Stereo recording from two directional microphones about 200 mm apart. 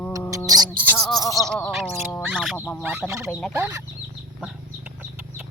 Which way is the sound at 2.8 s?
10° right (ahead or behind).